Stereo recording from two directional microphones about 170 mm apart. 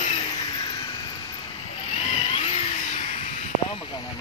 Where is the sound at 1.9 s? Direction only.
35° left (ahead or behind).